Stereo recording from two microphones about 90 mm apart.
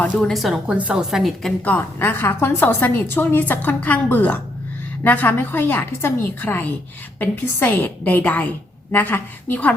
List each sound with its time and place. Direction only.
0.0 s a woman's voice: 5° left (ahead or behind)
0.7 s a woman's voice: 10° right (ahead or behind)
1.6 s a woman's voice: 20° left (ahead or behind)